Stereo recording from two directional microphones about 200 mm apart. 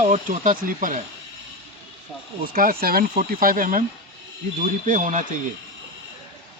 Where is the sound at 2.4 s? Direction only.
45° right (ahead or behind).